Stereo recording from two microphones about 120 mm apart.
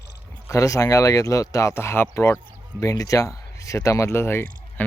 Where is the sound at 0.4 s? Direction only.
25° left (ahead or behind).